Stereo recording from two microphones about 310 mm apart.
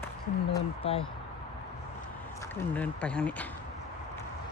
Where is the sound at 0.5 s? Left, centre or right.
Centre.